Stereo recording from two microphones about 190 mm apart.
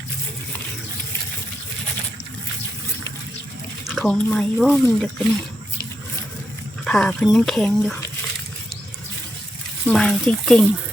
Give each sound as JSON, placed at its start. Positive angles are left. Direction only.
{"t": 3.8, "sound": "speech", "side_deg": 0}
{"t": 6.8, "sound": "speech", "side_deg": 5}
{"t": 9.8, "sound": "speech", "side_deg": 0}